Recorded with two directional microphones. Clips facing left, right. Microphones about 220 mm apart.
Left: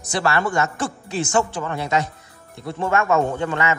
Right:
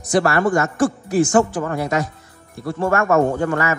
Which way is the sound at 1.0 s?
25° left (ahead or behind).